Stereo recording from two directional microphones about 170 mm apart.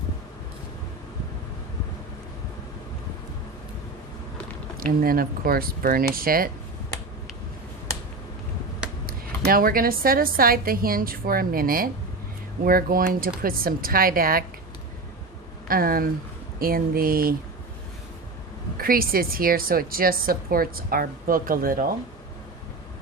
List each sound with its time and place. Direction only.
4.8 s a woman's voice: 60° right (ahead or behind)
9.0 s a woman's voice: 60° right (ahead or behind)
15.6 s a woman's voice: 60° right (ahead or behind)
18.8 s a woman's voice: 60° right (ahead or behind)